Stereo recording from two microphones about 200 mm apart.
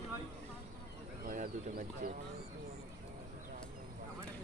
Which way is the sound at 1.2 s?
45° right (ahead or behind).